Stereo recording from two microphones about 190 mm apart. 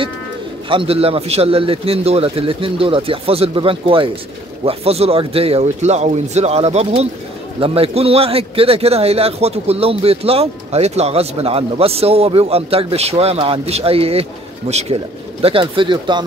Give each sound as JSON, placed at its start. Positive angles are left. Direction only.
{"t": 0.7, "sound": "a man's voice", "side_deg": -30}